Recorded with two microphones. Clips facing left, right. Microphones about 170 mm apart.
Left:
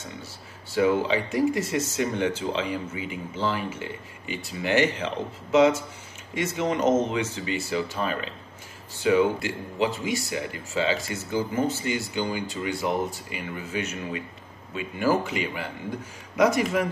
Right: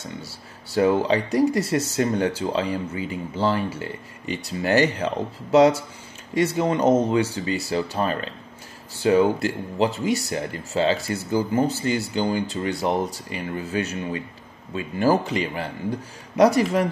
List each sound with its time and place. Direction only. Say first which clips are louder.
0.2 s speech: right 3 dB; 40° right (ahead or behind)